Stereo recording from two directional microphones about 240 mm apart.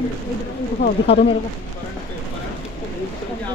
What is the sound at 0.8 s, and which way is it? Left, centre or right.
Speech, left.